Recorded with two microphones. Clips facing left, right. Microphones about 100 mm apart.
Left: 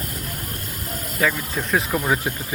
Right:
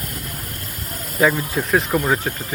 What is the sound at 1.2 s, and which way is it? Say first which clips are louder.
Speech: right 5 dB; 20° right (ahead or behind).